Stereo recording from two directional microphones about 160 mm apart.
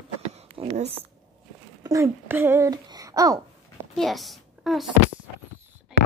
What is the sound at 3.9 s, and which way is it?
Speech, centre (ahead or behind).